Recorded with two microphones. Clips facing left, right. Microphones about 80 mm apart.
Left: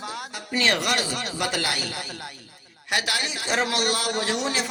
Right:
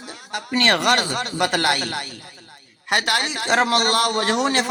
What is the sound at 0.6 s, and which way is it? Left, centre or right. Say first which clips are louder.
A man's voice: right 5 dB; right.